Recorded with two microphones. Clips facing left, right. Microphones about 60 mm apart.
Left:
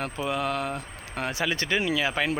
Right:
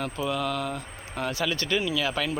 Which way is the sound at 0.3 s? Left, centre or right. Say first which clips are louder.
Left 2 dB; left.